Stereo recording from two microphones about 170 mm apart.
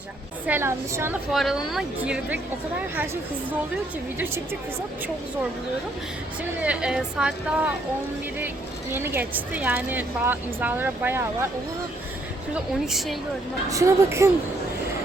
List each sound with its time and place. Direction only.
0.4 s a woman's voice: 15° right (ahead or behind)
1.3 s a woman's voice: centre (ahead or behind)
6.6 s a woman's voice: 5° right (ahead or behind)
8.9 s a woman's voice: 10° right (ahead or behind)
12.8 s a woman's voice: centre (ahead or behind)
13.7 s a woman's voice: 20° right (ahead or behind)